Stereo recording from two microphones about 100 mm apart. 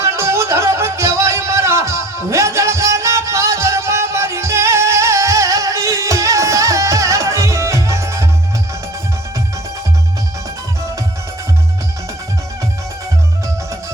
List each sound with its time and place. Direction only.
0.0 s music: 25° right (ahead or behind)